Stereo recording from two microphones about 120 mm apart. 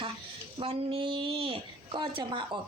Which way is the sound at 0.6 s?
50° right (ahead or behind).